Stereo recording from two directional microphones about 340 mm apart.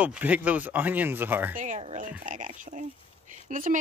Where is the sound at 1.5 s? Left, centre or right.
Right.